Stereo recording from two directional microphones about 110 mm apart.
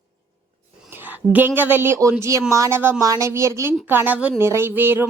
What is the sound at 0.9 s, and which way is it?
A woman's voice, 20° right (ahead or behind).